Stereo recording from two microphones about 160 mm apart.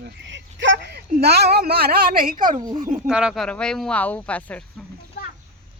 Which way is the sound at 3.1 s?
5° right (ahead or behind).